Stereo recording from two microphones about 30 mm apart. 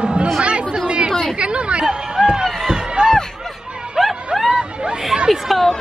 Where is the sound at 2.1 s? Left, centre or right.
Right.